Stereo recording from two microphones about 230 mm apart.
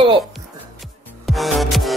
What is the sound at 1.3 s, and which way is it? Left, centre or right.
Music, centre.